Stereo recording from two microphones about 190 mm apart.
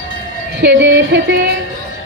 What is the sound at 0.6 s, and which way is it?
Music, 65° right (ahead or behind).